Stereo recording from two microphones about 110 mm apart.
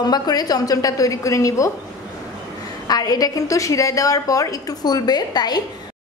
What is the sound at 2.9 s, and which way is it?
A woman's voice, 35° left (ahead or behind).